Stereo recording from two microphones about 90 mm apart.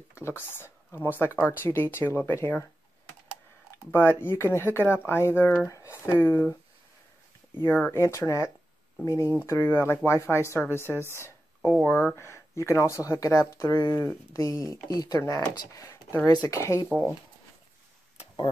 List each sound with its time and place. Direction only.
0.2 s speech: 25° left (ahead or behind)
3.9 s speech: 25° left (ahead or behind)
7.8 s speech: 30° left (ahead or behind)
10.8 s a woman's voice: 25° right (ahead or behind)
11.1 s a sound: 30° left (ahead or behind)
11.8 s speech: 25° left (ahead or behind)
14.6 s speech: 40° left (ahead or behind)